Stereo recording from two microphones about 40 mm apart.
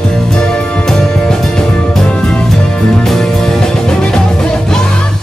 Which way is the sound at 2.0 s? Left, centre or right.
Left.